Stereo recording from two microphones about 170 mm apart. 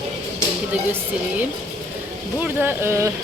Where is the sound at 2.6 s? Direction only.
15° right (ahead or behind).